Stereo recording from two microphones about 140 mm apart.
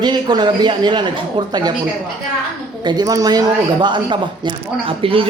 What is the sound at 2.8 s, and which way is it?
Speech, 30° right (ahead or behind).